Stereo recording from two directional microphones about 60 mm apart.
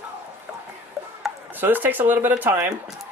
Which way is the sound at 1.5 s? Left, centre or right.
Right.